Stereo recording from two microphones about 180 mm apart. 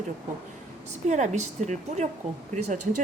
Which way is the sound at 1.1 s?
40° right (ahead or behind).